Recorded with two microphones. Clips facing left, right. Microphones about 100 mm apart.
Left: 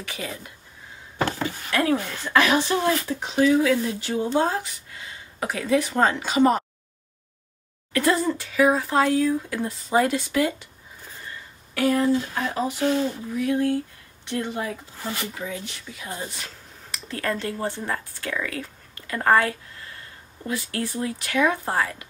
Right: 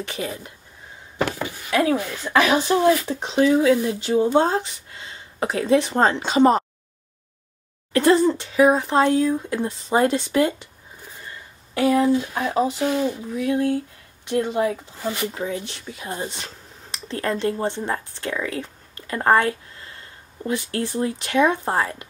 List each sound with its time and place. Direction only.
0.0 s speech: 25° right (ahead or behind)
7.9 s speech: 30° right (ahead or behind)
11.8 s speech: 15° right (ahead or behind)